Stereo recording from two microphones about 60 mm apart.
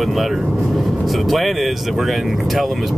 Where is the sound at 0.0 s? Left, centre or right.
Centre.